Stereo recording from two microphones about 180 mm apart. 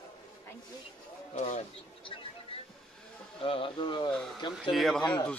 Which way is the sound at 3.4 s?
30° left (ahead or behind).